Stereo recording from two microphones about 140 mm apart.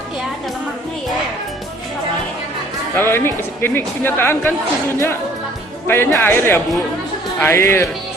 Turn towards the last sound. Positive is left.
turn(degrees=15)  # may be behind; listen again after turning